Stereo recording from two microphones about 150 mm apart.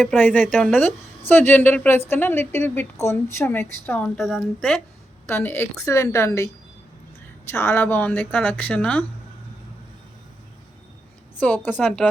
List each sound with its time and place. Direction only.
0.2 s a woman's voice: 10° left (ahead or behind)
0.4 s speech: 5° right (ahead or behind)
1.3 s a woman's voice: 15° left (ahead or behind)
5.3 s a woman's voice: 15° left (ahead or behind)
11.3 s a woman's voice: 10° left (ahead or behind)